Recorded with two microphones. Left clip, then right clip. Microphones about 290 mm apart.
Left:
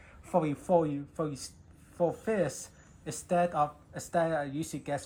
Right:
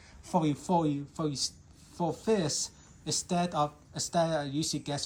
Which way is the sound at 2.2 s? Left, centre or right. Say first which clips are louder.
Right 1 dB; right.